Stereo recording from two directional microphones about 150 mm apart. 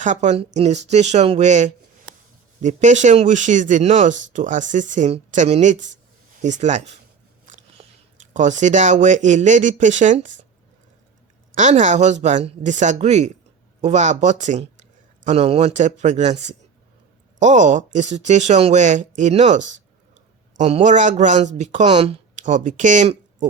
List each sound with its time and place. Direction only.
0.0 s speech: 55° right (ahead or behind)
11.5 s speech: 50° right (ahead or behind)
15.3 s speech: 45° right (ahead or behind)
21.8 s speech: 40° right (ahead or behind)